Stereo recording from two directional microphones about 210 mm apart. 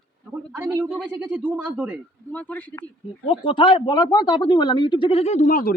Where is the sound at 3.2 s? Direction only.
25° left (ahead or behind); by 5.7 s 40° left (ahead or behind).